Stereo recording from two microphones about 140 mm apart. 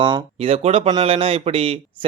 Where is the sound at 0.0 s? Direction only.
40° right (ahead or behind).